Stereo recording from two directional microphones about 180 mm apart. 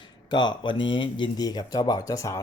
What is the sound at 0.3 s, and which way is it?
Speech, 25° left (ahead or behind).